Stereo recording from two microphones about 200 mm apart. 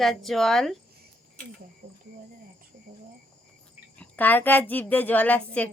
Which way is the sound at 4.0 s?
10° left (ahead or behind).